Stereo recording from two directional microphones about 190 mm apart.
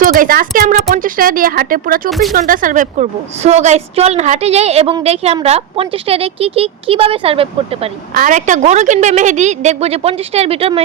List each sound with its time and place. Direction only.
0.0 s speech: 50° right (ahead or behind)
2.0 s speech: centre (ahead or behind)
2.3 s speech: 45° right (ahead or behind); by 7.9 s 30° right (ahead or behind)
8.1 s speech: 45° right (ahead or behind)